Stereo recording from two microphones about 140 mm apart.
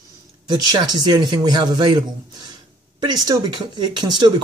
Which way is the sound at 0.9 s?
30° right (ahead or behind).